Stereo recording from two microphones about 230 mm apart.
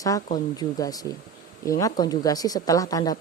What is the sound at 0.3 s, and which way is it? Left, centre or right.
Speech, centre.